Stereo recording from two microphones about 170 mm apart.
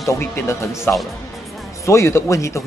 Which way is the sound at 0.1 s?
15° left (ahead or behind).